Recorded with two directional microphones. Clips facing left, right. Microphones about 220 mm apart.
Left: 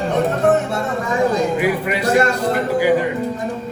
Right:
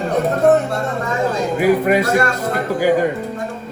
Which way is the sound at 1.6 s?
45° right (ahead or behind).